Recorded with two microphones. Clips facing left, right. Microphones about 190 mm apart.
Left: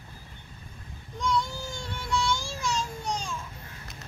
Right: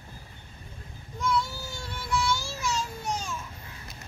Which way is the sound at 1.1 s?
5° right (ahead or behind).